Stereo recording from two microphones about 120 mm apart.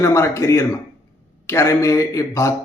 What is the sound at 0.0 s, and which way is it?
A man's voice, 25° left (ahead or behind).